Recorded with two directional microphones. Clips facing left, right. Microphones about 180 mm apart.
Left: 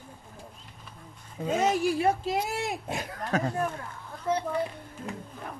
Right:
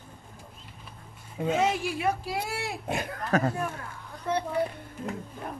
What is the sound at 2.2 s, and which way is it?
Speech, 20° left (ahead or behind).